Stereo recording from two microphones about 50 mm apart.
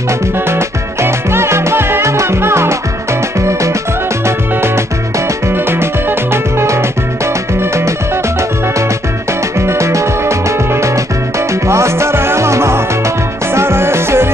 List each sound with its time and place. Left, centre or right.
0.5 s music: right
3.3 s music: right
5.5 s music: right
9.6 s music: right
13.6 s music: right